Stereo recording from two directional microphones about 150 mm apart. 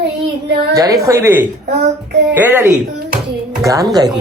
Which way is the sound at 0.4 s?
90° right.